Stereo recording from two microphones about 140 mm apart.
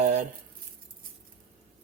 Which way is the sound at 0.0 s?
60° right (ahead or behind).